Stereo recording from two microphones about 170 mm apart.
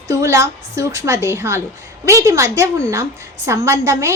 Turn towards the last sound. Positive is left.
turn(degrees=-15)  # may be behind; listen again after turning